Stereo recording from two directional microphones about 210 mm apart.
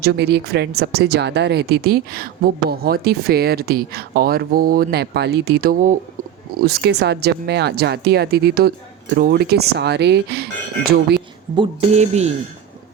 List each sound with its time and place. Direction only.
0.0 s speech: 50° right (ahead or behind)
11.5 s speech: 25° right (ahead or behind)